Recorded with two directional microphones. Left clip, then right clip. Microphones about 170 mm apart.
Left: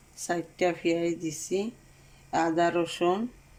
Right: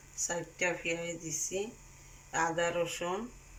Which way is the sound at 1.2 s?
90° left.